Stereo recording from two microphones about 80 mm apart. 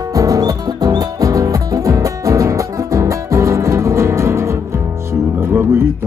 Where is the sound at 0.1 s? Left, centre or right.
Right.